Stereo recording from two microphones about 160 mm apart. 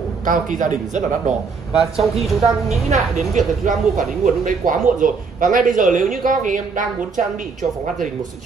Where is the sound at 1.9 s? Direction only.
Centre (ahead or behind).